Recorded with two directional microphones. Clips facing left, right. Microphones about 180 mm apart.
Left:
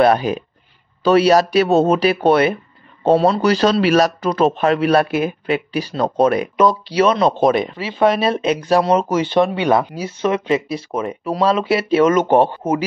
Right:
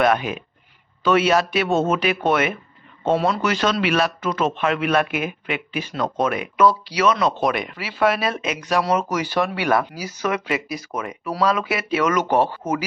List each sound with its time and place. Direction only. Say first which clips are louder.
0.0 s speech: left 5 dB; 35° left (ahead or behind)
6.5 s speech: left 2 dB; 25° left (ahead or behind)